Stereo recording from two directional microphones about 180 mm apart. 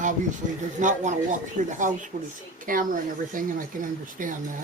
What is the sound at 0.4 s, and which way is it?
Speech, 45° right (ahead or behind).